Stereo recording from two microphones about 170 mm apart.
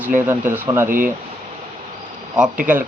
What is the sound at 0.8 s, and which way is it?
Speech, 55° right (ahead or behind).